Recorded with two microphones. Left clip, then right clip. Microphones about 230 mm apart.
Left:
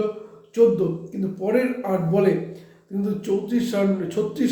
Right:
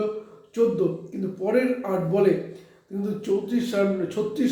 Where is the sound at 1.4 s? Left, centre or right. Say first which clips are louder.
Left 1 dB; centre.